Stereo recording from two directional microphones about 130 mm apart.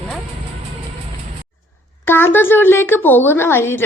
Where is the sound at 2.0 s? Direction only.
15° left (ahead or behind).